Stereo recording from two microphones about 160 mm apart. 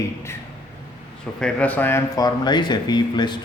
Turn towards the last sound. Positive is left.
turn(degrees=30)  # may be behind; listen again after turning